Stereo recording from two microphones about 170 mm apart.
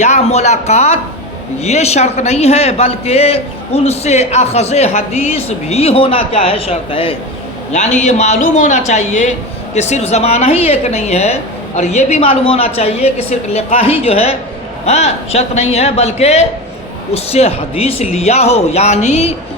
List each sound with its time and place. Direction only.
0.0 s a man's voice: 40° left (ahead or behind)
7.7 s a man's voice: 45° left (ahead or behind)